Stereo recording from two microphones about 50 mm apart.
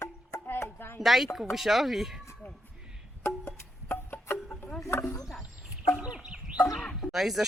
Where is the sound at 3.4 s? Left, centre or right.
Left.